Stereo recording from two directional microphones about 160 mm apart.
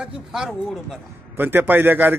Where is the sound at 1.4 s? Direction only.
10° right (ahead or behind).